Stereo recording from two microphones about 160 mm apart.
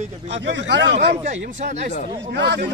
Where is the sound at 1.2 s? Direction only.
50° right (ahead or behind).